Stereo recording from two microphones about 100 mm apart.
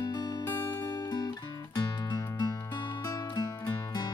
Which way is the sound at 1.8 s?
40° left (ahead or behind).